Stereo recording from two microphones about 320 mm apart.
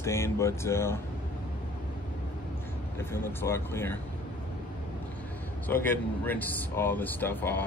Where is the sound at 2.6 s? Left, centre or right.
Centre.